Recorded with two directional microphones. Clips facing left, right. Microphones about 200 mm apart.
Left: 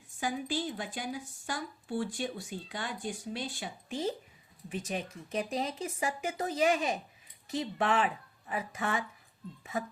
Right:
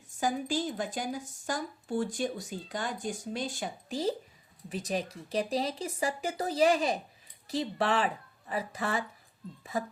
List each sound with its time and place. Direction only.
0.2 s speech: 45° right (ahead or behind)